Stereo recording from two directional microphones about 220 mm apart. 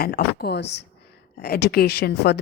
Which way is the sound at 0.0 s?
45° left (ahead or behind).